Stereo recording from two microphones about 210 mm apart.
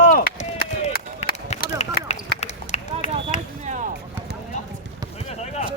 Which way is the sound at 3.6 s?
35° right (ahead or behind).